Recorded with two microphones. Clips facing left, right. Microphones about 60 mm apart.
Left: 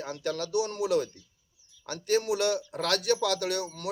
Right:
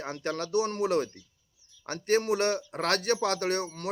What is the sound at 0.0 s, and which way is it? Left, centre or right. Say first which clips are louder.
Speech: even; right.